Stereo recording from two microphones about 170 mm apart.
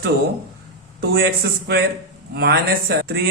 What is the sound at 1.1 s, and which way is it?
Speech, 65° right (ahead or behind).